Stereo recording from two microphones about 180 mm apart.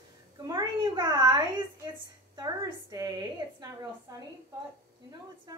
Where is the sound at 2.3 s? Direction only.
20° right (ahead or behind).